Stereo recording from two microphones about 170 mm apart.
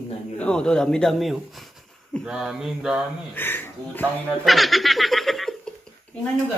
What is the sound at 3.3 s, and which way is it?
Speech, 10° left (ahead or behind).